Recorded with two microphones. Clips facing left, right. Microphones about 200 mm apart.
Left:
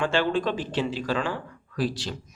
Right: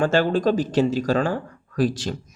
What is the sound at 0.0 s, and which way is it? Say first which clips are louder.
Speech: right 5 dB; 40° right (ahead or behind).